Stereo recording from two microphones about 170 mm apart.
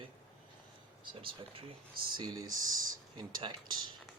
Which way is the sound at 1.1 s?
30° right (ahead or behind).